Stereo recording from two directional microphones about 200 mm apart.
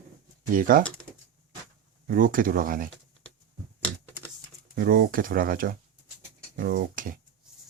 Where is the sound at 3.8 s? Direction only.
5° left (ahead or behind).